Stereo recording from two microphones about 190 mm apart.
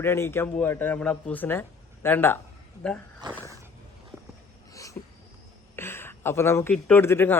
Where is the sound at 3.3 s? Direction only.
15° right (ahead or behind).